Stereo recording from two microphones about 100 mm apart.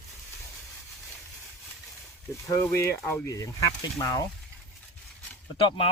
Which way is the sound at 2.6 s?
25° left (ahead or behind).